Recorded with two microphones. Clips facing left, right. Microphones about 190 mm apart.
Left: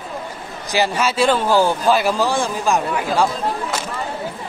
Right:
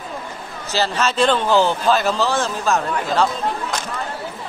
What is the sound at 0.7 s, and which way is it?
Speech, 15° left (ahead or behind).